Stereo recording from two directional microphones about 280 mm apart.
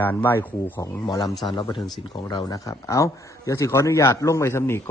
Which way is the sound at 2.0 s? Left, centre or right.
Centre.